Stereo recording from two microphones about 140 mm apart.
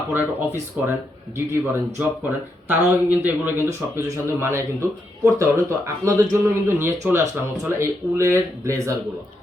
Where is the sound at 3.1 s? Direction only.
15° right (ahead or behind).